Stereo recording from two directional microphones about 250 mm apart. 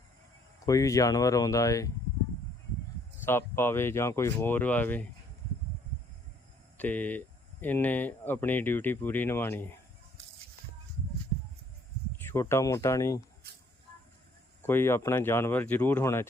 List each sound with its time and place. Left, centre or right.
0.6 s speech: centre
3.2 s speech: centre
6.7 s speech: centre
12.1 s speech: centre
14.7 s speech: centre